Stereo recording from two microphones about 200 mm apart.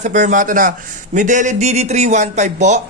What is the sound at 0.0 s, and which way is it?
A man's voice, 40° right (ahead or behind).